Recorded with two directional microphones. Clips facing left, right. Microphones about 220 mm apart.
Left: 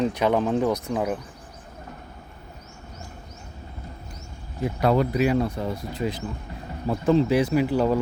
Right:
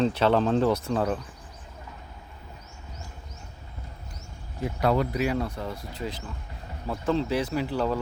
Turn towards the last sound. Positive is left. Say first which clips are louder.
# left 6 dB
turn(degrees=15)  # may be behind; listen again after turning